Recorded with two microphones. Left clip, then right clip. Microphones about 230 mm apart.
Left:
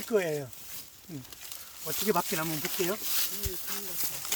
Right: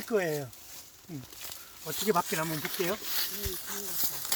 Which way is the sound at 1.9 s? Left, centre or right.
Left.